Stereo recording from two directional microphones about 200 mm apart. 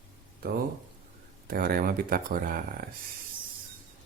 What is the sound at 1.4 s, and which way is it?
Speech, 50° right (ahead or behind).